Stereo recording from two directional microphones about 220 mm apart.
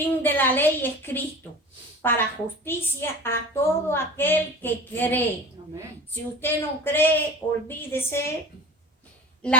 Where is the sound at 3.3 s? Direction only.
10° left (ahead or behind).